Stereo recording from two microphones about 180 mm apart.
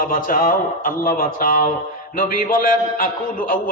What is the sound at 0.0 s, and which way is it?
A man's voice, 50° left (ahead or behind).